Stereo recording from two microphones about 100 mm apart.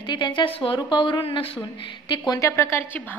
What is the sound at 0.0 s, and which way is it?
A woman's voice, 50° left (ahead or behind).